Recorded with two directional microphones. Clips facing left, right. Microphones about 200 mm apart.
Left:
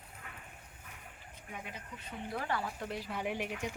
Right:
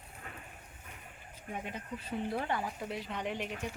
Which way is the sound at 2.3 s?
20° right (ahead or behind).